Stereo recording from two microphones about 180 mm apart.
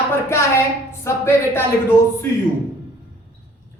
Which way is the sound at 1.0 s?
15° left (ahead or behind).